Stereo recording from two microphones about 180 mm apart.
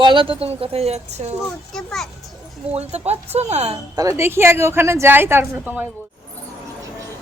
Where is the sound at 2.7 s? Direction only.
35° right (ahead or behind).